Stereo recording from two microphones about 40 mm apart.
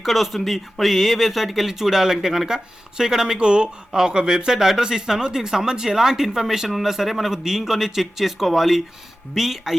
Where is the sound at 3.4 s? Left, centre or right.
Right.